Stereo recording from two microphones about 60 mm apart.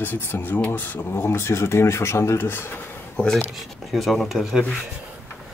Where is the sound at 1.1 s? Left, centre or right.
Left.